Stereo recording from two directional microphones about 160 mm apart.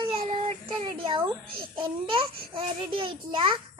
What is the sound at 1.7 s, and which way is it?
A child's voice, 30° right (ahead or behind).